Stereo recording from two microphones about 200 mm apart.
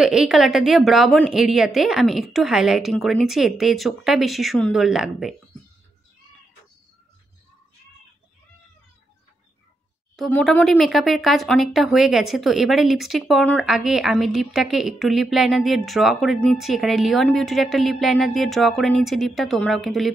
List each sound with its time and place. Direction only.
0.0 s speech: 5° right (ahead or behind)
10.1 s speech: 5° left (ahead or behind)